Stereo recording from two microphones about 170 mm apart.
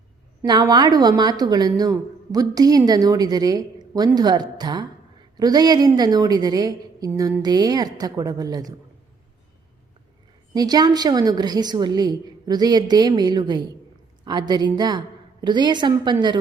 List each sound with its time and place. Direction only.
0.4 s a woman's voice: 25° right (ahead or behind)
10.5 s a woman's voice: 25° right (ahead or behind)